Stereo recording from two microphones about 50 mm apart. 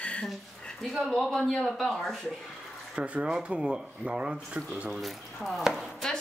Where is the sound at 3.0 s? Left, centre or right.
Right.